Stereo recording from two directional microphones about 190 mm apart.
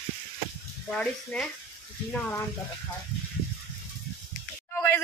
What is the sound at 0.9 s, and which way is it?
Speech, 5° left (ahead or behind).